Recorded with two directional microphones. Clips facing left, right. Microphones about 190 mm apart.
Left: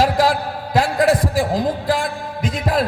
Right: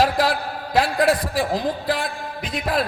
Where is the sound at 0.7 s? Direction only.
45° left (ahead or behind).